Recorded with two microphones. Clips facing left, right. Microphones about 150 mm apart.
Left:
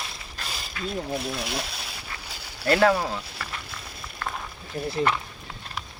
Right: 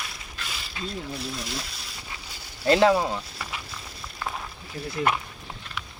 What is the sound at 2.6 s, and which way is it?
Speech, 20° right (ahead or behind).